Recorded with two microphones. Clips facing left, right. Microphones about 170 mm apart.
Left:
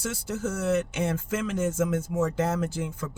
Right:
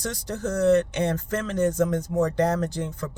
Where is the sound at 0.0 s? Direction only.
5° left (ahead or behind).